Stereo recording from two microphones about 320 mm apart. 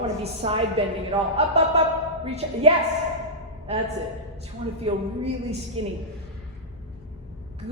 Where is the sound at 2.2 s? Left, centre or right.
Centre.